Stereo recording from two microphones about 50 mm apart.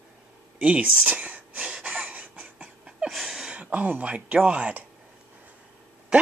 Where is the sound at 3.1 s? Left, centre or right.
Centre.